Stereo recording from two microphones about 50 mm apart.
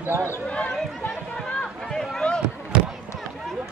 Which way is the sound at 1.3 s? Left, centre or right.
Centre.